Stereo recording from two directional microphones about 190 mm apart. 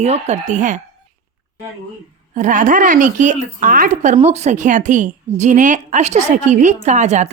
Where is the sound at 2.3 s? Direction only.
40° right (ahead or behind).